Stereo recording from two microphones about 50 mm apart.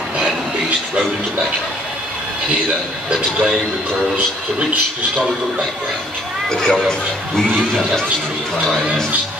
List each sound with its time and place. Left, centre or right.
6.5 s speech: centre